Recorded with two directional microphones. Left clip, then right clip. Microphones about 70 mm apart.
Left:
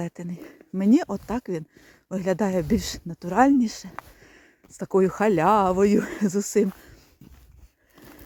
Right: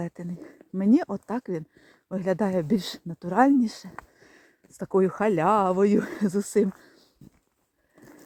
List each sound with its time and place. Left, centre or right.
0.0 s speech: left
5.7 s speech: left
8.0 s a sound: left